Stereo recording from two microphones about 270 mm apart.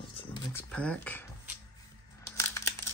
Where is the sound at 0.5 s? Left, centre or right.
Centre.